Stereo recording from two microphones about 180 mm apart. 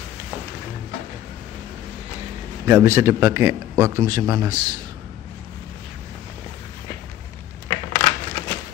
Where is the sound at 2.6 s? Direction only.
15° right (ahead or behind).